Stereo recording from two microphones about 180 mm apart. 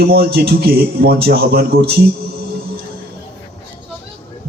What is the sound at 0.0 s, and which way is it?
A man's voice, 60° right (ahead or behind).